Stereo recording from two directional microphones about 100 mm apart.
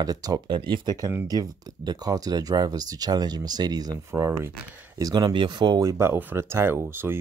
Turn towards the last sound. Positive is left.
turn(degrees=-25)  # may be behind; listen again after turning